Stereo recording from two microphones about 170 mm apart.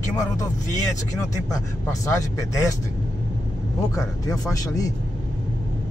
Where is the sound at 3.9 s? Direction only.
20° left (ahead or behind).